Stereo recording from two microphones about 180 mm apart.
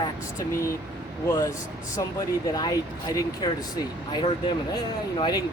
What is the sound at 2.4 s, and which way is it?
Speech, 20° left (ahead or behind).